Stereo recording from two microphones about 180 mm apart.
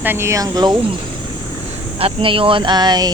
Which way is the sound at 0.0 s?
15° right (ahead or behind).